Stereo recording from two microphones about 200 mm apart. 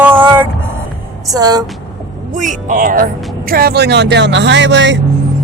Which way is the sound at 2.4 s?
40° right (ahead or behind).